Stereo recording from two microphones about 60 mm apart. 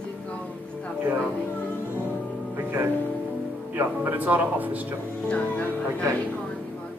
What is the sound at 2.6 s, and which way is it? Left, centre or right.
Music, right.